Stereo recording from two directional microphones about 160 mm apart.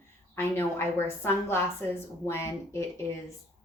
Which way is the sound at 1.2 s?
15° left (ahead or behind).